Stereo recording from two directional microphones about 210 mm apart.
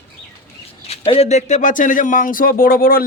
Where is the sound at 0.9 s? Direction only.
30° left (ahead or behind); by 3.0 s 45° left (ahead or behind).